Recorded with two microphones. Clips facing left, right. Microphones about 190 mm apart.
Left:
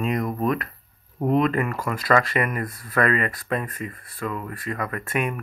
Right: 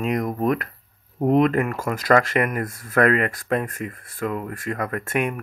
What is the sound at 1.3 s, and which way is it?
Speech, 60° right (ahead or behind).